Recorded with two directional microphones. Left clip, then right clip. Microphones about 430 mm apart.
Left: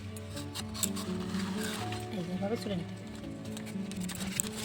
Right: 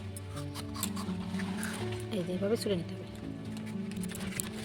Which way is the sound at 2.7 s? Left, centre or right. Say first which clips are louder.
Right 5 dB; centre.